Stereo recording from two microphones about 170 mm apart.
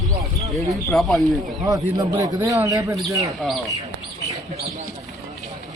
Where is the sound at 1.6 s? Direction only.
20° right (ahead or behind).